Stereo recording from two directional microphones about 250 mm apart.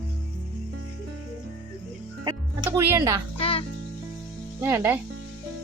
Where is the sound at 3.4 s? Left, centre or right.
Left.